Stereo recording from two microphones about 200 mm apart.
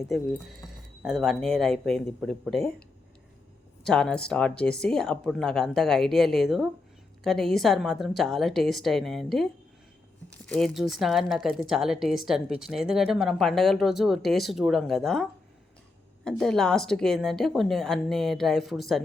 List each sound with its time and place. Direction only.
0.1 s a woman's voice: centre (ahead or behind)
3.8 s a woman's voice: 5° left (ahead or behind)